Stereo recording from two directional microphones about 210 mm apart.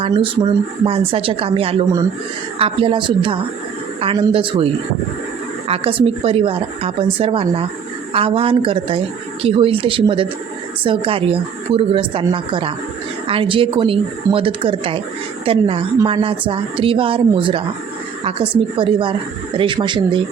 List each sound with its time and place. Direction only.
0.0 s speech: 25° right (ahead or behind)